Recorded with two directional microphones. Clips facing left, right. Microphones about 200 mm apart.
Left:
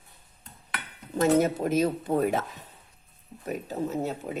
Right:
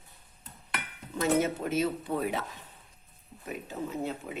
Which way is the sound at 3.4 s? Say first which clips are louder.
Left 6 dB; 40° left (ahead or behind).